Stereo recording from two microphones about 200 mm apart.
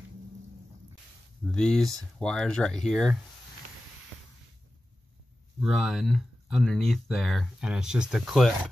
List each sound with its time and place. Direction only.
1.4 s speech: 5° left (ahead or behind)
5.6 s speech: centre (ahead or behind)